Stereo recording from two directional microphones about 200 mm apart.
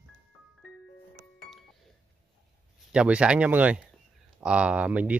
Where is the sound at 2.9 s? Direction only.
5° right (ahead or behind).